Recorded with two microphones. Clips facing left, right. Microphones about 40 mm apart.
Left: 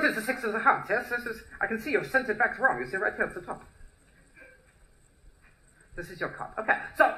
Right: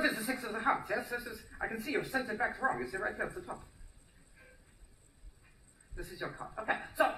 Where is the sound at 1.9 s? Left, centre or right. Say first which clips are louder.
Left 9 dB; left.